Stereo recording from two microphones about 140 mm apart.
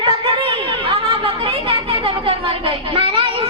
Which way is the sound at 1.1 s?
40° right (ahead or behind).